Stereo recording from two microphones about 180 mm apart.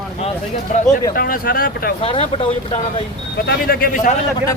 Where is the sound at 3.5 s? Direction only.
55° left (ahead or behind).